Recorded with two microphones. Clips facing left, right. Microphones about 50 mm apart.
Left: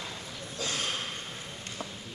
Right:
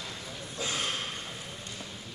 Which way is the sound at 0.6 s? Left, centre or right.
Centre.